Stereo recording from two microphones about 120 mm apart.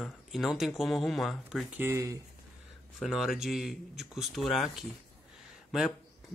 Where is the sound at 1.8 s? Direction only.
20° right (ahead or behind).